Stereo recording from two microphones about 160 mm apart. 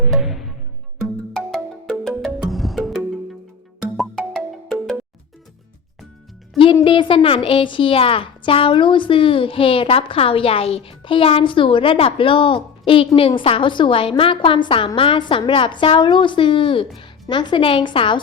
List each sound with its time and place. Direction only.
0.1 s music: centre (ahead or behind)
1.5 s music: 5° left (ahead or behind)
6.8 s a woman's voice: 30° left (ahead or behind)